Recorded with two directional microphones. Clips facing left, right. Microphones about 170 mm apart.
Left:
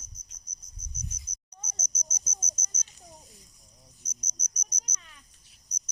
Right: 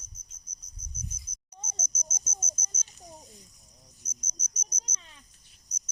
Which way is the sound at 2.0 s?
25° right (ahead or behind).